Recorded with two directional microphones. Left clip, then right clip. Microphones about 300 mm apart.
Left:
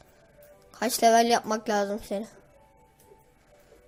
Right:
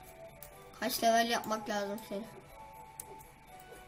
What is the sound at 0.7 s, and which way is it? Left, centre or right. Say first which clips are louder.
Speech: left 8 dB; left.